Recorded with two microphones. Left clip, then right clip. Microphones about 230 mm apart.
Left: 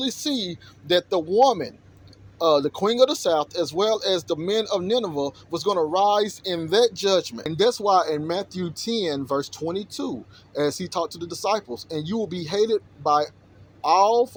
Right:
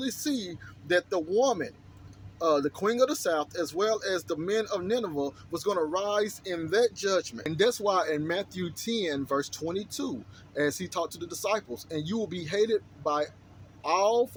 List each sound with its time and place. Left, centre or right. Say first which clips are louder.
0.0 s speech: left 6 dB; centre